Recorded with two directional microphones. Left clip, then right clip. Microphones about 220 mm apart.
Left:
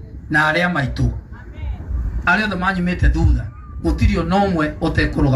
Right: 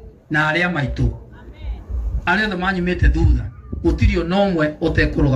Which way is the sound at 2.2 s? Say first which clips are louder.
Left 2 dB; 55° left (ahead or behind).